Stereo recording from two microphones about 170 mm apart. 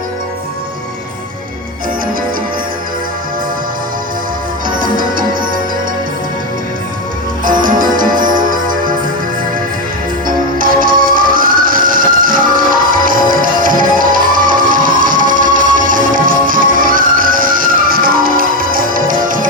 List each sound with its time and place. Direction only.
4.7 s music: 55° right (ahead or behind)
7.4 s music: 55° right (ahead or behind)
10.2 s music: 55° right (ahead or behind)